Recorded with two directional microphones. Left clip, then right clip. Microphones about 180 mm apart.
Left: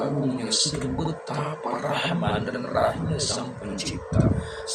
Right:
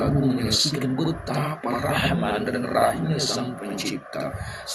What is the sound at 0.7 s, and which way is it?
Speech, 15° right (ahead or behind).